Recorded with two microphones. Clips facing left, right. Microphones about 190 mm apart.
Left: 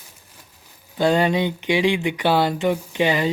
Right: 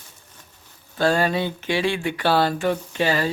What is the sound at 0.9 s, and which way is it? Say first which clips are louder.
Speech: left 2 dB; 20° left (ahead or behind).